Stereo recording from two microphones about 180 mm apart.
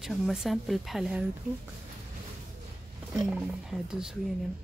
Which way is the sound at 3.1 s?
Centre (ahead or behind).